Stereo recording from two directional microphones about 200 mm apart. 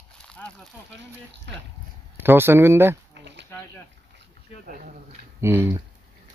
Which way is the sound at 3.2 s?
60° right (ahead or behind).